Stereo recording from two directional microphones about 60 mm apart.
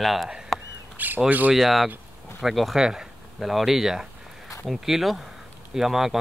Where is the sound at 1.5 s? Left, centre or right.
Centre.